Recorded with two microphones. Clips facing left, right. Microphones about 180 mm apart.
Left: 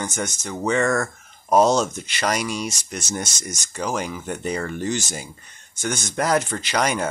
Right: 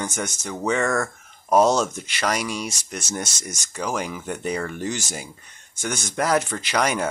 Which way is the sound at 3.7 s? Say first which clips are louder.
Left 1 dB; 5° left (ahead or behind).